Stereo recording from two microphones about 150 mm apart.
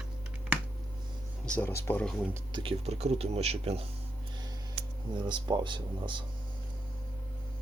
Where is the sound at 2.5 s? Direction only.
35° right (ahead or behind).